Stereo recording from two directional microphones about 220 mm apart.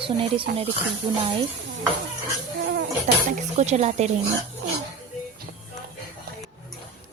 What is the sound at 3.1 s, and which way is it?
Speech, 30° right (ahead or behind).